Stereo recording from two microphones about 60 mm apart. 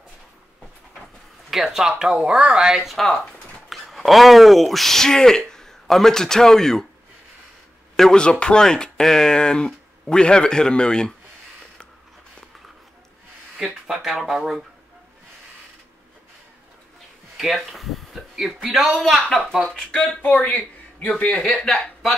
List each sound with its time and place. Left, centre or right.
1.5 s a man's voice: centre
7.9 s speech: centre
13.6 s speech: centre
17.4 s speech: centre
20.4 s a man's voice: left
21.5 s speech: centre